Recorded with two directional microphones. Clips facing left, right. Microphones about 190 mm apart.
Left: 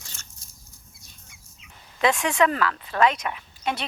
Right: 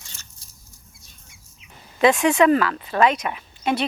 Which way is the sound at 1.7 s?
15° right (ahead or behind).